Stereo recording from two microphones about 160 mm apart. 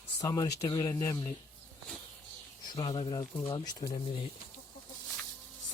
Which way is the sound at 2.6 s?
25° left (ahead or behind).